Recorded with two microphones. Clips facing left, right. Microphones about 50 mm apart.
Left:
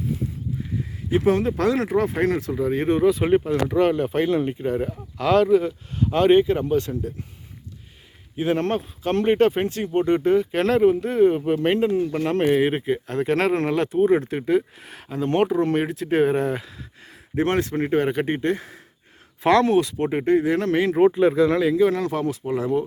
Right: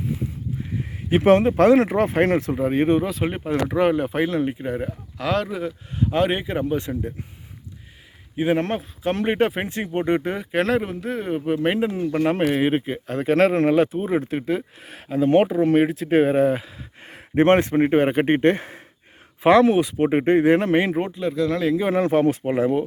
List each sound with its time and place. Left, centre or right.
0.9 s a sound: right
1.4 s speech: right
3.0 s speech: centre
3.4 s speech: centre
8.4 s speech: centre
17.0 s speech: right
18.3 s speech: right
19.4 s speech: centre; by 20.6 s right
20.6 s speech: right
21.1 s speech: left
21.8 s speech: right